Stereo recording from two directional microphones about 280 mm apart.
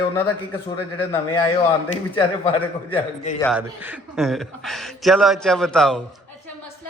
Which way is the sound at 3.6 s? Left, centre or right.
Centre.